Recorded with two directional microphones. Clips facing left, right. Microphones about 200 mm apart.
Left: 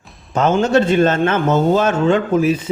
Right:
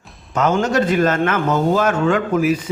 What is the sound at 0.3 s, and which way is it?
A man's voice, 30° left (ahead or behind).